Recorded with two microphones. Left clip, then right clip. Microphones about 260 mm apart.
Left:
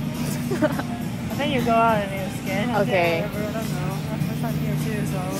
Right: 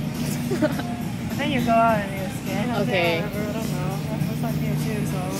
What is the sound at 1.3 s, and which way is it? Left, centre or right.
Vehicle, centre.